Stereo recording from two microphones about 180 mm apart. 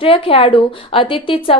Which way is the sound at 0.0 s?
30° left (ahead or behind).